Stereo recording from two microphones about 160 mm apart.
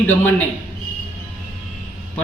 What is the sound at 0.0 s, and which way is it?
Speech, 10° left (ahead or behind).